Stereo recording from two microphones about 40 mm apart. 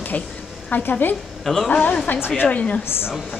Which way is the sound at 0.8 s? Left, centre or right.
Left.